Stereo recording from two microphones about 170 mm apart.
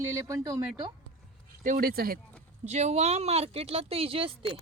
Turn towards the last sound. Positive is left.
turn(degrees=-30)  # may be behind; listen again after turning